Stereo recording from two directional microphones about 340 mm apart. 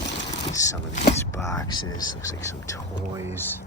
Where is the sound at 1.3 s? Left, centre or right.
Centre.